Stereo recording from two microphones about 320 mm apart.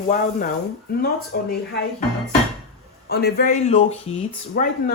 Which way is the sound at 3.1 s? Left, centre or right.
Left.